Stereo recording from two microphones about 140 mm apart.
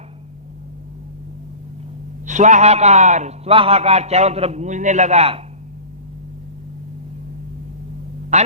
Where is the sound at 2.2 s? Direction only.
60° right (ahead or behind).